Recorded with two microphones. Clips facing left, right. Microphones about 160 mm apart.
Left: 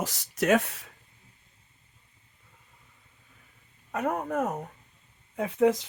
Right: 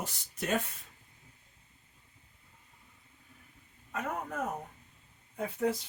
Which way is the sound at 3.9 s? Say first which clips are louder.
Left 7 dB; 65° left (ahead or behind).